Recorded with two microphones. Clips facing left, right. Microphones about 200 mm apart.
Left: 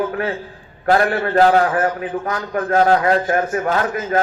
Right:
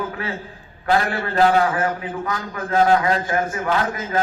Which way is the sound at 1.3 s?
45° left (ahead or behind).